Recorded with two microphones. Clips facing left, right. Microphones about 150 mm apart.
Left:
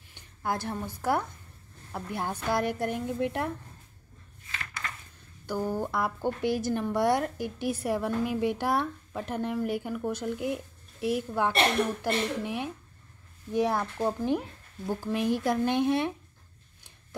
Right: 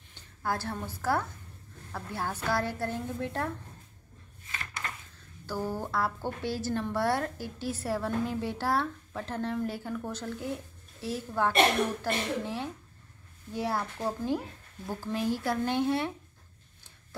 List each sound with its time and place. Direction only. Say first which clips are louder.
0.1 s a woman's voice: left 1 dB; 15° left (ahead or behind)
5.5 s a woman's voice: left 3 dB; 15° left (ahead or behind)